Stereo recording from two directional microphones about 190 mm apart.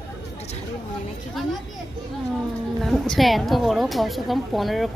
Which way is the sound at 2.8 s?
Centre (ahead or behind).